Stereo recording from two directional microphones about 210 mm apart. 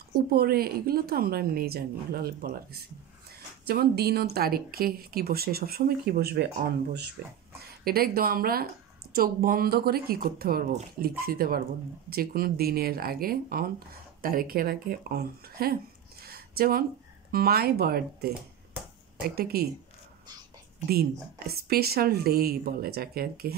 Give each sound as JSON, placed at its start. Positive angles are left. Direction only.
{"t": 0.3, "sound": "speech", "side_deg": -45}
{"t": 20.9, "sound": "speech", "side_deg": -45}